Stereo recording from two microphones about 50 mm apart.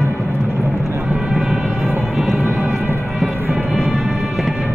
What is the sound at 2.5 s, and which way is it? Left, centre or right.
Music, right.